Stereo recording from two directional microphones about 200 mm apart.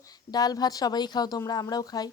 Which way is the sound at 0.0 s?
20° left (ahead or behind).